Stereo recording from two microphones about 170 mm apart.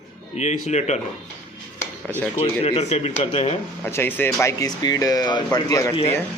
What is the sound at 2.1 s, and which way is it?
Speech, 10° left (ahead or behind).